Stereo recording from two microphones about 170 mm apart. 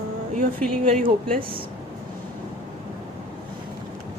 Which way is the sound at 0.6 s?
5° left (ahead or behind).